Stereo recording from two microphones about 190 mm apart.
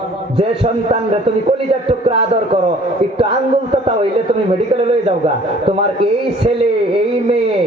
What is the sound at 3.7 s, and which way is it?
A man's voice, 30° right (ahead or behind).